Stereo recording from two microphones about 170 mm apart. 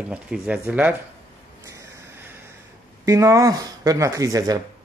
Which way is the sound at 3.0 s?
20° right (ahead or behind).